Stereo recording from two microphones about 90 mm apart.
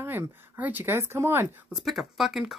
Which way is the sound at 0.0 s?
25° right (ahead or behind).